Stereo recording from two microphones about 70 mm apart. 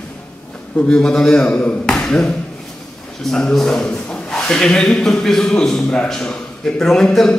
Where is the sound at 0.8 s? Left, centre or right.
Centre.